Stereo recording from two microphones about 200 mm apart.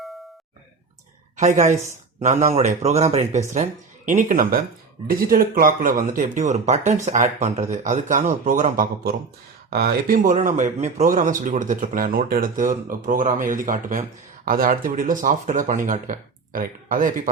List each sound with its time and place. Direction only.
1.4 s a man's voice: 35° right (ahead or behind)